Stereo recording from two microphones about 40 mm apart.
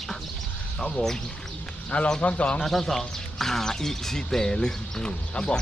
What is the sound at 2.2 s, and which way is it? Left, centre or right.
Speech, left.